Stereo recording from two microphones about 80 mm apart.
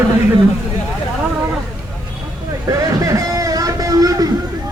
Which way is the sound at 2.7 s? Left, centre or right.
Right.